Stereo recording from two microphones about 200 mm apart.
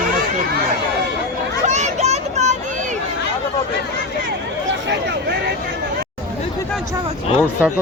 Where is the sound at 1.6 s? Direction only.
35° right (ahead or behind).